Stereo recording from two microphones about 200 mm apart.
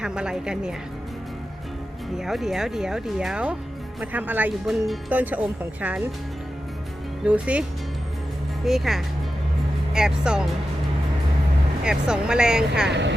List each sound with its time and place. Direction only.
0.0 s speech: 5° right (ahead or behind)
2.1 s speech: centre (ahead or behind)
7.3 s speech: 5° right (ahead or behind)
8.6 s speech: centre (ahead or behind)
11.9 s speech: 5° right (ahead or behind)
12.9 s speech: 60° right (ahead or behind)